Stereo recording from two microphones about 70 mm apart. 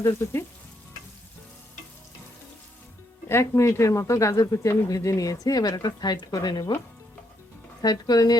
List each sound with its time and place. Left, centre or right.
0.2 s frying: left
3.2 s a woman's voice: left
7.8 s speech: left